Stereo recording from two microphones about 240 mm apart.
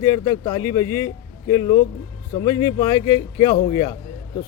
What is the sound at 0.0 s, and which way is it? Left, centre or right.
A man's voice, centre.